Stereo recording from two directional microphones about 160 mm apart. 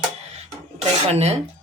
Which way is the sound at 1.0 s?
40° right (ahead or behind).